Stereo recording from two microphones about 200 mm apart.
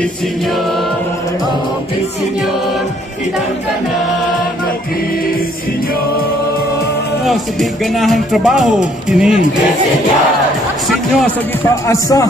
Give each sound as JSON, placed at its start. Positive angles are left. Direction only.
{"t": 8.0, "sound": "a man's voice", "side_deg": 0}
{"t": 11.9, "sound": "a man's voice", "side_deg": 15}